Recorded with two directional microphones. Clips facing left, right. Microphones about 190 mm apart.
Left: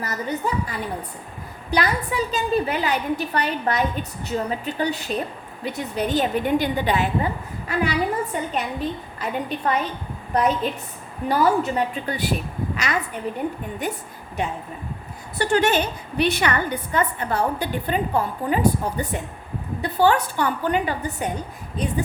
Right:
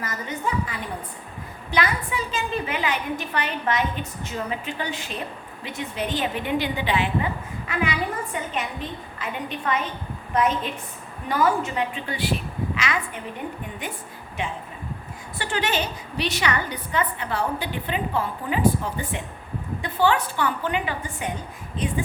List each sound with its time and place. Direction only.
0.0 s a woman's voice: 40° left (ahead or behind)
15.4 s a woman's voice: 45° left (ahead or behind)